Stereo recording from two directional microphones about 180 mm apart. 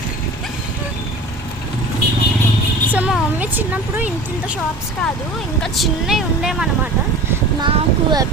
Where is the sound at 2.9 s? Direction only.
5° right (ahead or behind).